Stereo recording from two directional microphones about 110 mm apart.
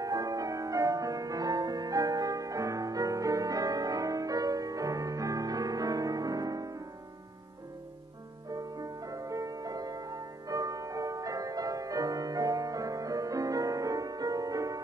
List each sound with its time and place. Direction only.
0.0 s music: 35° right (ahead or behind)
8.5 s music: 35° right (ahead or behind)